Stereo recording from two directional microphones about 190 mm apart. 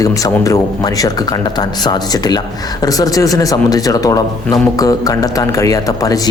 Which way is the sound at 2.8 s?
20° left (ahead or behind).